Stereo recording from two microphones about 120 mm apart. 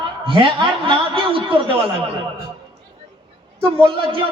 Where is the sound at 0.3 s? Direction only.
45° right (ahead or behind).